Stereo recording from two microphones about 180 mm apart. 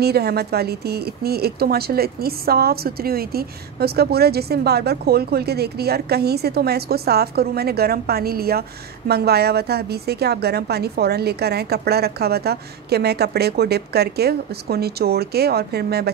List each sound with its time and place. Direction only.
0.0 s speech: 60° right (ahead or behind)